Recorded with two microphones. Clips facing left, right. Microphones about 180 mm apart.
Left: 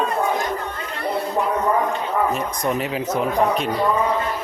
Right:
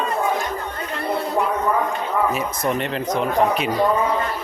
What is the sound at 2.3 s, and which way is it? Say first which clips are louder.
Speech: even; 5° right (ahead or behind).